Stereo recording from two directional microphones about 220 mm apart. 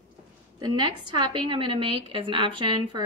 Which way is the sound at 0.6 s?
20° right (ahead or behind).